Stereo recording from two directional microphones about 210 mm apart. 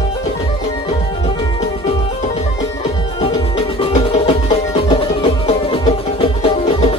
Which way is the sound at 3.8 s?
30° left (ahead or behind).